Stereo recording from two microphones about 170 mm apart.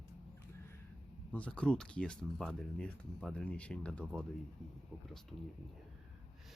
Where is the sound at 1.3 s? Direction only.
5° left (ahead or behind).